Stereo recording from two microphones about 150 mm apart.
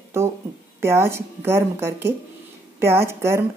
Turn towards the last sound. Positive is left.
turn(degrees=-15)  # may be behind; listen again after turning